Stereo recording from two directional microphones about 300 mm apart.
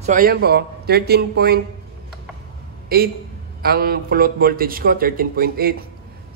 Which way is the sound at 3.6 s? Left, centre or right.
Right.